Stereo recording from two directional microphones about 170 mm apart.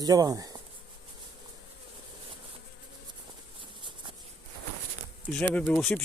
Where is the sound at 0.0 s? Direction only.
20° right (ahead or behind).